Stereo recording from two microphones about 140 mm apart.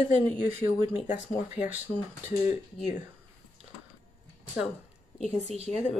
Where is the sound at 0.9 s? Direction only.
55° left (ahead or behind).